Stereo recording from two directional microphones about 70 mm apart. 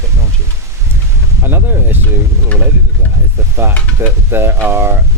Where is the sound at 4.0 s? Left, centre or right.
Right.